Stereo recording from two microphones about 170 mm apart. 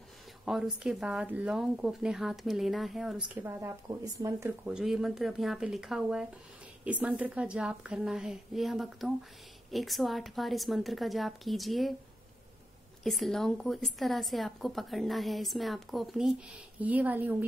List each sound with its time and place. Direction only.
0.5 s a woman's voice: centre (ahead or behind)
3.4 s speech: 15° right (ahead or behind)
4.6 s a woman's voice: 5° right (ahead or behind)
13.0 s a woman's voice: centre (ahead or behind)